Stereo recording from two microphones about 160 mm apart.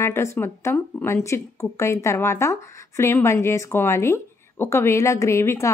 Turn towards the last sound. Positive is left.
turn(degrees=20)  # may be behind; listen again after turning